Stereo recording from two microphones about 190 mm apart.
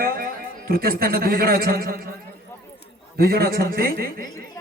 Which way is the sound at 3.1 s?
55° right (ahead or behind).